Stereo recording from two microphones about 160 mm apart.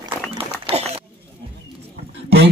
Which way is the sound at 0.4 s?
35° right (ahead or behind).